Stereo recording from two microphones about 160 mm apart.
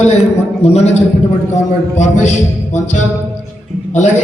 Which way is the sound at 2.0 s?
50° left (ahead or behind).